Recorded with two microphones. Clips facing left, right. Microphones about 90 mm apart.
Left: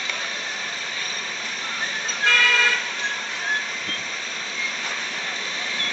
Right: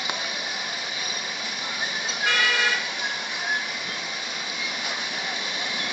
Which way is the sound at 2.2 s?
15° right (ahead or behind).